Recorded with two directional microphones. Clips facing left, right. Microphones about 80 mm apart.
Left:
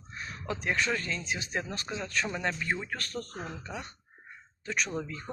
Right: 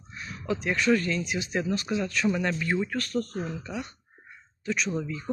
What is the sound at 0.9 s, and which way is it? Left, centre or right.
Speech, left.